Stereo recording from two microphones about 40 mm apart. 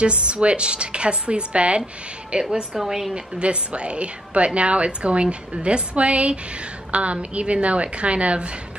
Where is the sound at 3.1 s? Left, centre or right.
Right.